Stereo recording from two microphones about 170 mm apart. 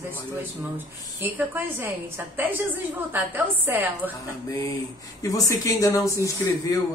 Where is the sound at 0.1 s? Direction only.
10° right (ahead or behind).